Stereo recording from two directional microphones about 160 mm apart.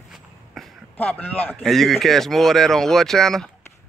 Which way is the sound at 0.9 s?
10° left (ahead or behind).